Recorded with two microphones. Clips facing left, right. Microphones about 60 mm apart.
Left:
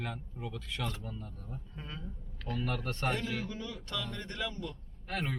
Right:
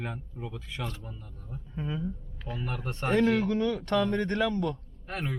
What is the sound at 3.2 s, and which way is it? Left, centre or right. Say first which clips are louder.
Speech: right 13 dB; right.